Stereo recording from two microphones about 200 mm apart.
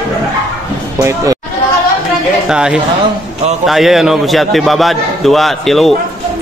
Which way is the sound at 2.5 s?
5° right (ahead or behind).